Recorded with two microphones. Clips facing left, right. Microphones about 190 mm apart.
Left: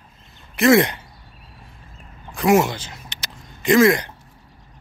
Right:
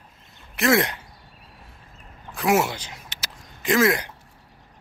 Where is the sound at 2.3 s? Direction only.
5° right (ahead or behind).